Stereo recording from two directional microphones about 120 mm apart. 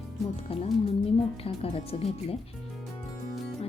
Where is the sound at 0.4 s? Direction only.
55° left (ahead or behind).